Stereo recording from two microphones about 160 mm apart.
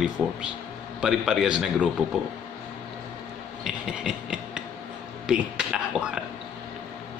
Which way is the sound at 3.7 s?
5° right (ahead or behind).